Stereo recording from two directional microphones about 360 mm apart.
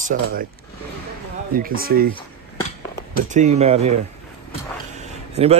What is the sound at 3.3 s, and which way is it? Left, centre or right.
Speech, centre.